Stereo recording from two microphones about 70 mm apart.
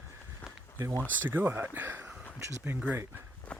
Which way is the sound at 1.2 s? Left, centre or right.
Right.